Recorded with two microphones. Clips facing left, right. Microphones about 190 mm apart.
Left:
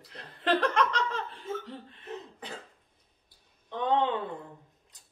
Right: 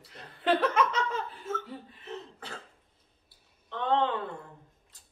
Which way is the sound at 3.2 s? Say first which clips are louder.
Left 2 dB; 15° left (ahead or behind).